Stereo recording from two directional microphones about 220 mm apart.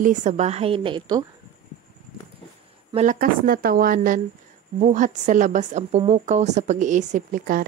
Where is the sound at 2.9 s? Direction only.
35° right (ahead or behind).